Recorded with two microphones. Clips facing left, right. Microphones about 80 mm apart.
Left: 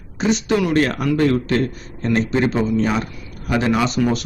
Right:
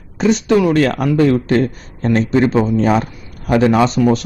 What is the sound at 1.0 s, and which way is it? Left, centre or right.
A man's voice, right.